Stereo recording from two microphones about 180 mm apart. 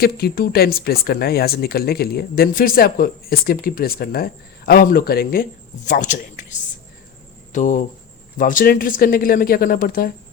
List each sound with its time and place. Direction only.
0.0 s a woman's voice: 60° left (ahead or behind)